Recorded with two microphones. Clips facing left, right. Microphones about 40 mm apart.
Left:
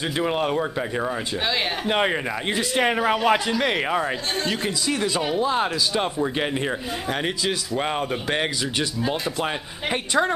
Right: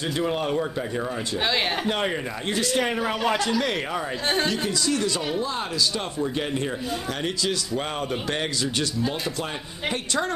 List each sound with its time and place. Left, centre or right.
0.2 s speech: left
7.7 s speech: centre